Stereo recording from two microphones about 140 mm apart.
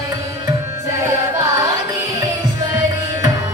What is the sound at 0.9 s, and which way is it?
Music, 20° right (ahead or behind).